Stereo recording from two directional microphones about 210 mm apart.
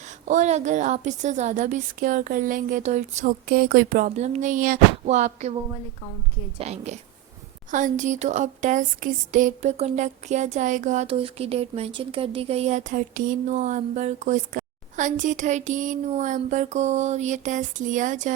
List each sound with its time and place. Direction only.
0.0 s speech: 35° right (ahead or behind)
6.6 s speech: 30° right (ahead or behind)